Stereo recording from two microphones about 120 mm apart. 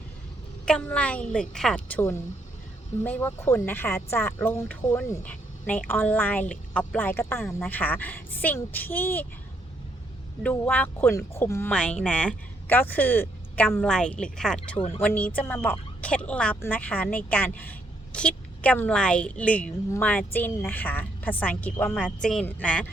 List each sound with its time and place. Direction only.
0.6 s a woman's voice: 10° left (ahead or behind)
2.0 s a woman's voice: 20° left (ahead or behind)
10.4 s a woman's voice: 15° left (ahead or behind)
11.7 s a woman's voice: 10° left (ahead or behind)
13.8 s a woman's voice: 5° left (ahead or behind)